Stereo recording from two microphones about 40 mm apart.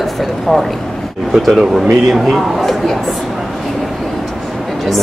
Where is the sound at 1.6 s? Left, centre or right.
Centre.